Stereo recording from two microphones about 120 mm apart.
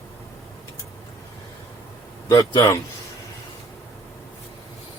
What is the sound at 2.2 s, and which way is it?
Speech, 35° left (ahead or behind).